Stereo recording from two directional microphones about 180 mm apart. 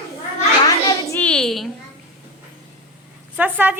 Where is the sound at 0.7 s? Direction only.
20° left (ahead or behind); by 1.7 s centre (ahead or behind).